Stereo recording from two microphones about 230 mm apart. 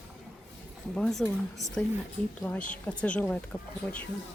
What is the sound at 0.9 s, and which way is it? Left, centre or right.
Speech, centre.